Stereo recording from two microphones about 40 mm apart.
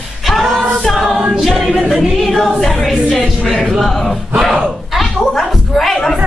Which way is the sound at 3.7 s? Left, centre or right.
Centre.